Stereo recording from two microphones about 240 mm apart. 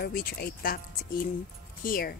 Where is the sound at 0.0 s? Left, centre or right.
Left.